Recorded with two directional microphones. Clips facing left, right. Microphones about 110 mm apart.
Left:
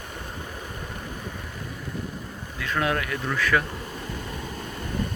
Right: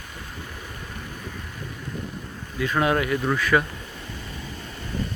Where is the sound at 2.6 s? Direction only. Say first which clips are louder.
Right 4 dB; 20° right (ahead or behind).